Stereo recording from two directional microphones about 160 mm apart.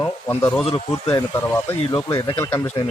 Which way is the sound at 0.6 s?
35° left (ahead or behind).